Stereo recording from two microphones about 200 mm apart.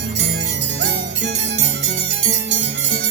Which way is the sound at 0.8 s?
60° right (ahead or behind).